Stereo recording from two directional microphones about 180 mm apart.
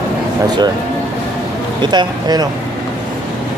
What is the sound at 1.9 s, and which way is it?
Speech, 20° right (ahead or behind).